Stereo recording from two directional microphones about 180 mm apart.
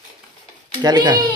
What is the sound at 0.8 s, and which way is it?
Speech, 25° right (ahead or behind).